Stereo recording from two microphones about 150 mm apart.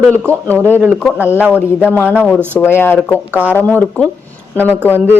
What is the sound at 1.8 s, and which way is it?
Speech, 15° left (ahead or behind).